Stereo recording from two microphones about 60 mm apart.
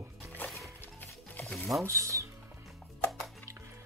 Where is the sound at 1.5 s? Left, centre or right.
Centre.